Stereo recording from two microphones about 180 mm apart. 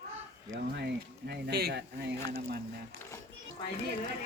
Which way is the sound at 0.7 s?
65° right (ahead or behind).